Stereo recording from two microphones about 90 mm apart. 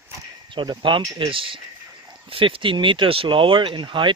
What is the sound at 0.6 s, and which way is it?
Speech, 65° right (ahead or behind).